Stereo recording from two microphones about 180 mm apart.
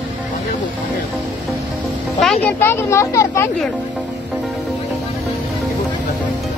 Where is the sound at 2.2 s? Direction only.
5° left (ahead or behind).